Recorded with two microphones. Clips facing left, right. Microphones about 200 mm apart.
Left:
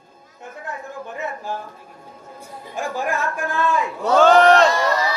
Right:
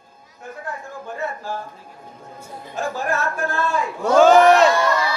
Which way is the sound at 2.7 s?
15° left (ahead or behind).